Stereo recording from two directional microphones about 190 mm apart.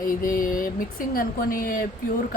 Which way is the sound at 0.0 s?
50° left (ahead or behind).